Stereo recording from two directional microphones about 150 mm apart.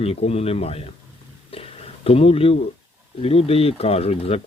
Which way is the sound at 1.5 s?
40° left (ahead or behind).